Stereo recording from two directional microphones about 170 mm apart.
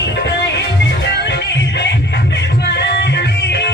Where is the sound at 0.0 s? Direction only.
90° left.